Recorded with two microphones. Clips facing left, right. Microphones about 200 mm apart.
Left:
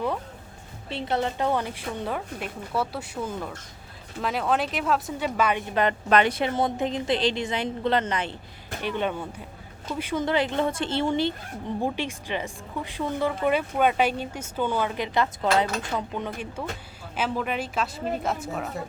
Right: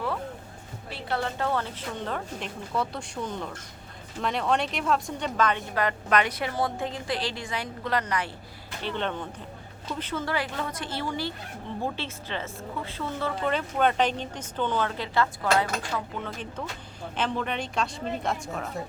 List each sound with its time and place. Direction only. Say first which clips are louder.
0.9 s a woman's voice: left 4 dB; 20° left (ahead or behind)
5.7 s a woman's voice: left 7 dB; 25° left (ahead or behind)
8.8 s a woman's voice: left 3 dB; 10° left (ahead or behind)